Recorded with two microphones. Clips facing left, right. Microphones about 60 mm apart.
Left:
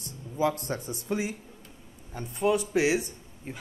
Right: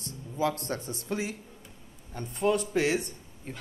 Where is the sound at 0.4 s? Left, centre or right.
Centre.